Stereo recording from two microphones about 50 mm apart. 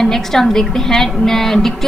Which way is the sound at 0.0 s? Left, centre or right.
Centre.